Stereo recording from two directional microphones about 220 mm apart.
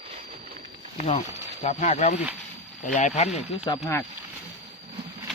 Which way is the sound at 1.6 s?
35° left (ahead or behind).